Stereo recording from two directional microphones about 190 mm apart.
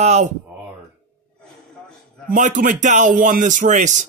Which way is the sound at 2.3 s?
45° right (ahead or behind).